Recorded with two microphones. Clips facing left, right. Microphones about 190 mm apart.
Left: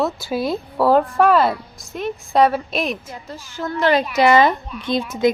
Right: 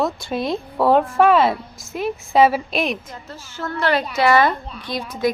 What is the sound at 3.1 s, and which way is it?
A woman's voice, 15° left (ahead or behind).